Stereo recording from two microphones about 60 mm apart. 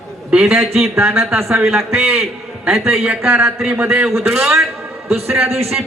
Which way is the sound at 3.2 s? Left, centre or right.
Right.